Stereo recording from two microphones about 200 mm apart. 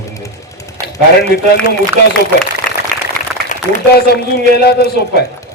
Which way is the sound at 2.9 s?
5° left (ahead or behind).